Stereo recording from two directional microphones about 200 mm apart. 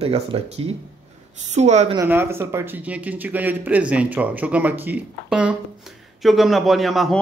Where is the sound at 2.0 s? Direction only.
10° right (ahead or behind).